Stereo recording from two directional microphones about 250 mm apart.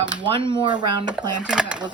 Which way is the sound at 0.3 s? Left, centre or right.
Centre.